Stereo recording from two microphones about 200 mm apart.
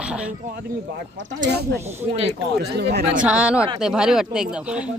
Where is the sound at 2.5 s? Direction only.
55° right (ahead or behind).